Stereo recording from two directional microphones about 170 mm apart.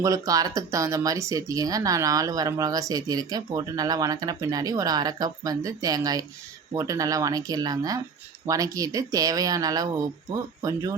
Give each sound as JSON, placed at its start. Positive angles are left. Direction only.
{"t": 0.0, "sound": "speech", "side_deg": -20}